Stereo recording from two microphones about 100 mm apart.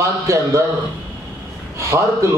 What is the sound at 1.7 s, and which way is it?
Speech, 30° right (ahead or behind).